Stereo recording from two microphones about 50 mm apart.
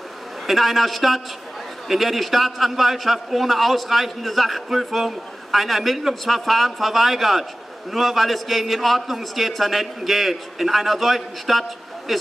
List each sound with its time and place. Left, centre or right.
0.5 s a man's voice: centre